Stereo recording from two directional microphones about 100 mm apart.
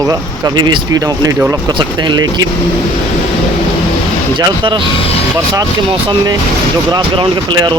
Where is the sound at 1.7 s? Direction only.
50° right (ahead or behind).